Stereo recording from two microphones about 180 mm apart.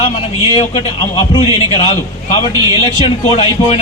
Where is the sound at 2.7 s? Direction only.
30° left (ahead or behind).